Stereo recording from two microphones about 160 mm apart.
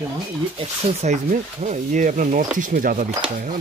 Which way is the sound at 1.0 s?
45° right (ahead or behind).